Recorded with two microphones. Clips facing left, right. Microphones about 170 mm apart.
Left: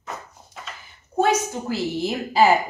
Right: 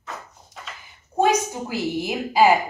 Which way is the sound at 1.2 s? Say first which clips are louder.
Right 1 dB; 15° right (ahead or behind).